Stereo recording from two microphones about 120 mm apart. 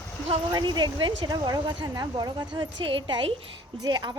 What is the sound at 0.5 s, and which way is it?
Speech, 40° right (ahead or behind).